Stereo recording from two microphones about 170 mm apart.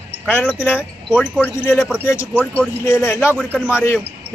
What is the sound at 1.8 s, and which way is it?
Speech, 5° right (ahead or behind).